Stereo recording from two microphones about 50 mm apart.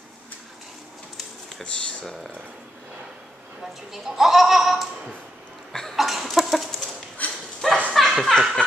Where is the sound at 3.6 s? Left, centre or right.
Centre.